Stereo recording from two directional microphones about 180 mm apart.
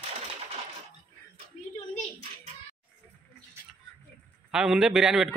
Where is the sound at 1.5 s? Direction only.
40° left (ahead or behind).